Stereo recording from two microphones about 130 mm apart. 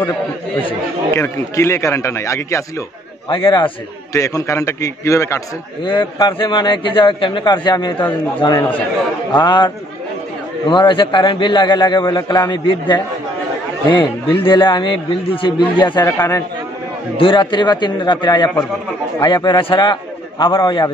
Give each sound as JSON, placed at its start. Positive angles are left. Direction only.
{"t": 1.1, "sound": "speech", "side_deg": 20}
{"t": 3.3, "sound": "a man's voice", "side_deg": 40}
{"t": 4.1, "sound": "speech", "side_deg": 25}
{"t": 5.9, "sound": "a man's voice", "side_deg": 35}
{"t": 10.7, "sound": "a man's voice", "side_deg": 40}
{"t": 17.2, "sound": "a man's voice", "side_deg": 40}